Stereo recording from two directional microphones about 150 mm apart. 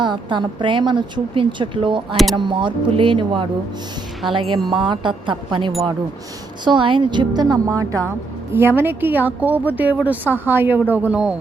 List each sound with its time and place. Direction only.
0.0 s a woman's voice: 30° right (ahead or behind); by 11.3 s 10° right (ahead or behind)